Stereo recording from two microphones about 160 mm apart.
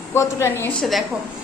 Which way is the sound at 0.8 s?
Centre (ahead or behind).